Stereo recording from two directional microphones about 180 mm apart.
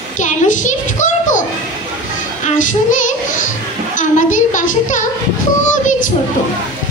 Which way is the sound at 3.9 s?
45° left (ahead or behind).